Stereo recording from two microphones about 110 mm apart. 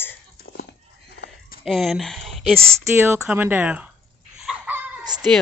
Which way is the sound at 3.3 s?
20° right (ahead or behind).